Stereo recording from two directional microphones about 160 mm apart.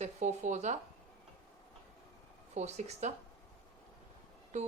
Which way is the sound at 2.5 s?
45° right (ahead or behind).